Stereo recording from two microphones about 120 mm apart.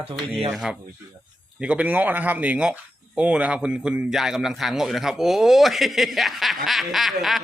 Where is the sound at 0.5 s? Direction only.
5° right (ahead or behind).